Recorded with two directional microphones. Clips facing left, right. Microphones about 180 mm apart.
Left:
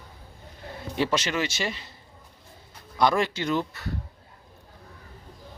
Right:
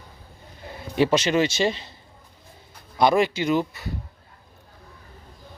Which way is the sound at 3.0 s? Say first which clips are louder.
Right 4 dB; 15° right (ahead or behind).